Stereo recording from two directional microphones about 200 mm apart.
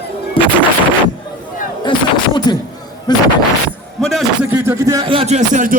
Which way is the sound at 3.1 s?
20° left (ahead or behind).